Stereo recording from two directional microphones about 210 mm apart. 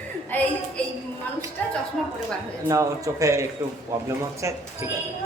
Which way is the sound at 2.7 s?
15° right (ahead or behind).